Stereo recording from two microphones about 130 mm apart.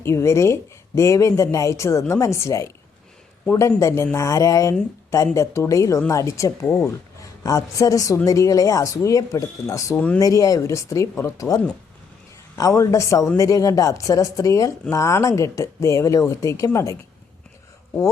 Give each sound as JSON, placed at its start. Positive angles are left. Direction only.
{"t": 0.0, "sound": "a woman's voice", "side_deg": 20}
{"t": 7.2, "sound": "a woman's voice", "side_deg": 25}